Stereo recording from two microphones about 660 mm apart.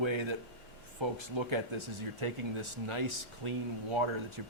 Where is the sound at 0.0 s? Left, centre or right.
Right.